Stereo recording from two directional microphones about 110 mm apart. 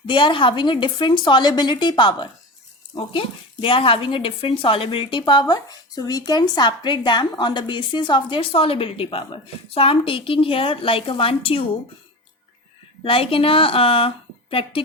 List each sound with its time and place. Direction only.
0.1 s speech: 50° left (ahead or behind)
13.0 s a woman's voice: 55° left (ahead or behind)